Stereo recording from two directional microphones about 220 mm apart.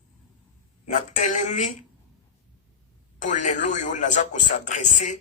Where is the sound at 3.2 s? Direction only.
35° left (ahead or behind).